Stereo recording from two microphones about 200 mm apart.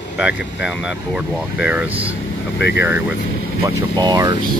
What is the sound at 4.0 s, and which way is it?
Speech, 20° right (ahead or behind).